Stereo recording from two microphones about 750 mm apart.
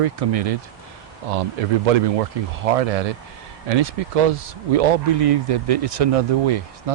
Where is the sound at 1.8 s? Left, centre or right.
Right.